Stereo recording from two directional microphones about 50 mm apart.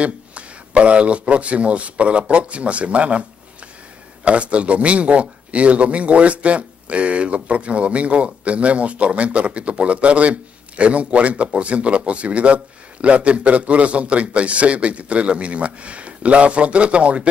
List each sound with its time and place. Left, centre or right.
0.0 s speech: right